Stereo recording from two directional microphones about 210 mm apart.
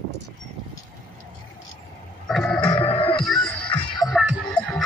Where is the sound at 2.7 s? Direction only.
25° left (ahead or behind).